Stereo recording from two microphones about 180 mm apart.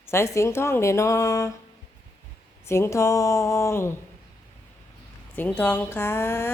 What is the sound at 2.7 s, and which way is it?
Speech, 15° left (ahead or behind).